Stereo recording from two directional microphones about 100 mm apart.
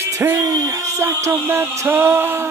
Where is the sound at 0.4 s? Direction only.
35° right (ahead or behind).